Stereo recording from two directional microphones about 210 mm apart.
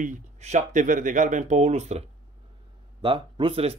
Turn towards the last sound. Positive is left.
turn(degrees=-25)  # may be behind; listen again after turning